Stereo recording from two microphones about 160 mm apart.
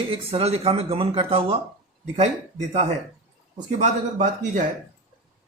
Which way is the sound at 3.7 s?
50° right (ahead or behind).